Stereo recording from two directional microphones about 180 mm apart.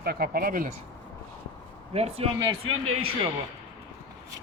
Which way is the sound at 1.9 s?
35° right (ahead or behind).